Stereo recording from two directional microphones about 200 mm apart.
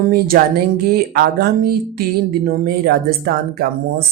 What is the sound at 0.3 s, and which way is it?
Speech, 45° right (ahead or behind).